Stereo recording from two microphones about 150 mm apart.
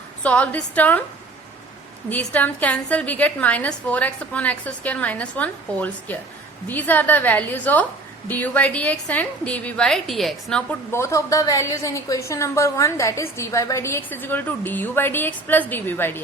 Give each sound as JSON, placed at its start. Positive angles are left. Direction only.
{"t": 0.2, "sound": "a woman's voice", "side_deg": 10}
{"t": 2.0, "sound": "a woman's voice", "side_deg": 10}
{"t": 10.9, "sound": "a woman's voice", "side_deg": 20}